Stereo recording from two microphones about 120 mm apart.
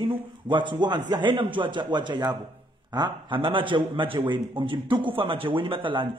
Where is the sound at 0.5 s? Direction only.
40° right (ahead or behind).